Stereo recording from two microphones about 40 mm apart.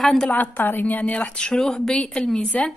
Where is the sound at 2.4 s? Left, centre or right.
Left.